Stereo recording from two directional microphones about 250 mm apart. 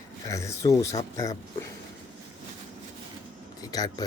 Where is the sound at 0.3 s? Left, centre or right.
Centre.